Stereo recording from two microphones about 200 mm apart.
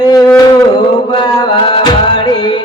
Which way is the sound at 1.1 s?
20° left (ahead or behind).